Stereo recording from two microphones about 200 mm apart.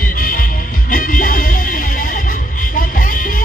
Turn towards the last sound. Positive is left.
turn(degrees=40)  # may be behind; listen again after turning